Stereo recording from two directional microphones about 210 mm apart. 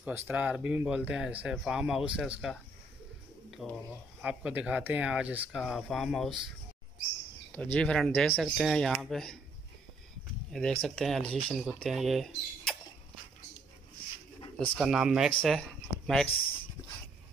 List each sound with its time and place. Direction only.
0.0 s speech: 5° right (ahead or behind)
3.6 s speech: 5° right (ahead or behind)
7.5 s speech: 5° left (ahead or behind)
10.5 s speech: centre (ahead or behind)
14.4 s pigeon: 25° left (ahead or behind)
14.8 s speech: 5° right (ahead or behind)